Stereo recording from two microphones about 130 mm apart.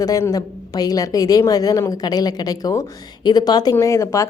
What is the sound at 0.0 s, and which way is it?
A woman's voice, 25° left (ahead or behind).